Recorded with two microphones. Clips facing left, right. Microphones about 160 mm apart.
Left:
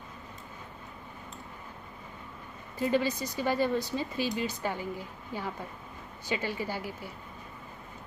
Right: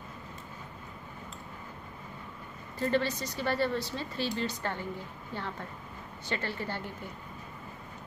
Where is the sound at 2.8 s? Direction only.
10° left (ahead or behind).